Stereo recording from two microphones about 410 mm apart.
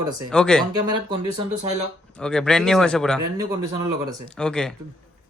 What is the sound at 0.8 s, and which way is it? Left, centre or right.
Speech, centre.